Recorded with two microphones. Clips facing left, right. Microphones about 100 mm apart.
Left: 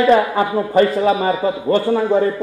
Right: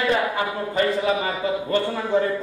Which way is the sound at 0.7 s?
40° left (ahead or behind).